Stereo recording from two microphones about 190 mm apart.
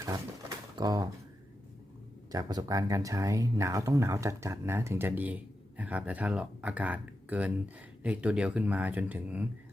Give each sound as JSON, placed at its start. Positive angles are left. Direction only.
{"t": 0.0, "sound": "pigeon", "side_deg": -20}
{"t": 2.3, "sound": "speech", "side_deg": -20}